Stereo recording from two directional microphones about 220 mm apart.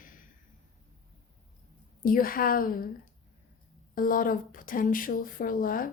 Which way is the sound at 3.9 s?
40° left (ahead or behind).